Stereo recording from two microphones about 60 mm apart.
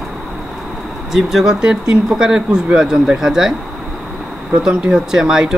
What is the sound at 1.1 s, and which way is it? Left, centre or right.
Speech, centre.